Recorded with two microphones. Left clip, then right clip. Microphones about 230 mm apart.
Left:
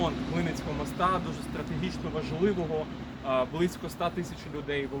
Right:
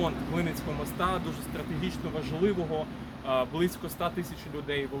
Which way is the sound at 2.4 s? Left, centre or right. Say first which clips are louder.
Even; centre.